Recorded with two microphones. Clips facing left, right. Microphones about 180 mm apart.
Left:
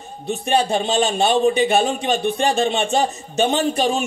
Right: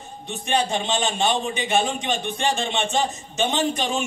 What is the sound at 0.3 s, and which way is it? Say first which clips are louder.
A man's voice: left 5 dB; 35° left (ahead or behind).